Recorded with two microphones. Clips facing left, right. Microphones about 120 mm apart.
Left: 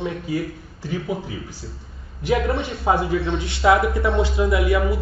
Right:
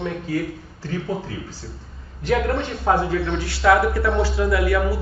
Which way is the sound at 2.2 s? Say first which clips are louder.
Even; 10° left (ahead or behind).